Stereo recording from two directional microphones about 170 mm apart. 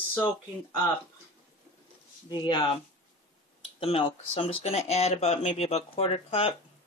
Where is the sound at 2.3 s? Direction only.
25° left (ahead or behind).